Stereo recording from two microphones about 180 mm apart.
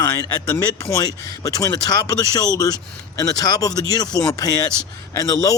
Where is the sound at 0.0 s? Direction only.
20° left (ahead or behind).